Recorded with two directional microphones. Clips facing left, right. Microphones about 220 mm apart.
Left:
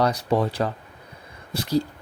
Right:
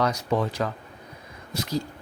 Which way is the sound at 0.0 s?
35° left (ahead or behind).